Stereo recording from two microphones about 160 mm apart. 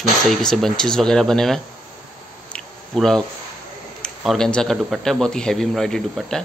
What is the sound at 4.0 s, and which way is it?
A man's voice, 5° left (ahead or behind).